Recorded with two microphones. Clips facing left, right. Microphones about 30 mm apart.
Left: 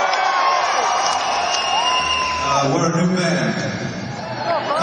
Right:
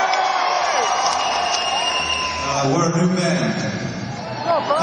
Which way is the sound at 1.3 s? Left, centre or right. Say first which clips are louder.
Left 1 dB; left.